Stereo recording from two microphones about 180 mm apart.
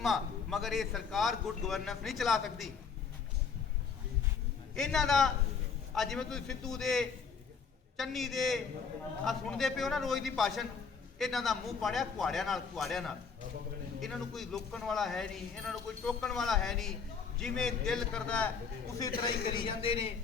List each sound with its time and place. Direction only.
0.0 s speech: centre (ahead or behind)
4.7 s speech: 5° left (ahead or behind)
19.5 s a man's voice: 25° left (ahead or behind)